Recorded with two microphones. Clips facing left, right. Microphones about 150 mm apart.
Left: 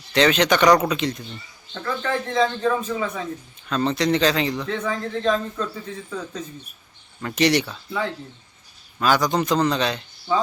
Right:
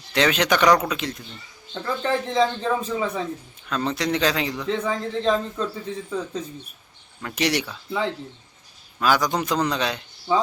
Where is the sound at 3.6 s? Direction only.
5° right (ahead or behind).